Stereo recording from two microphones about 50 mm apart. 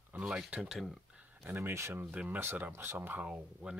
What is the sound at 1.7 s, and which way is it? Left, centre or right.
Speech, right.